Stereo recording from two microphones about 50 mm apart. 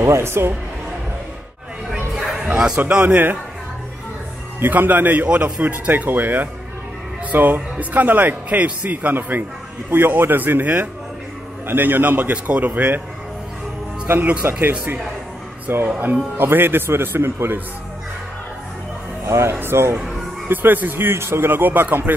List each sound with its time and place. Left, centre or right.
0.0 s speech: right
2.3 s a man's voice: centre
4.6 s a man's voice: right
14.0 s speech: right
14.4 s a man's voice: right
15.7 s a man's voice: right
19.2 s speech: right
20.4 s a man's voice: right